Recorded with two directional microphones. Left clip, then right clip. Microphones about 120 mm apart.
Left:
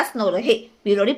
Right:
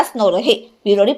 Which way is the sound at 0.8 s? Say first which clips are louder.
Right 6 dB; 20° right (ahead or behind).